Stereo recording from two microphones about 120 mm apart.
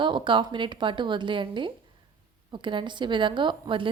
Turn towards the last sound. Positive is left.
turn(degrees=-45)  # may be behind; listen again after turning